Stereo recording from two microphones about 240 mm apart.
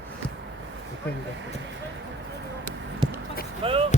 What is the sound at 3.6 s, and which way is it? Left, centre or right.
Speech, right.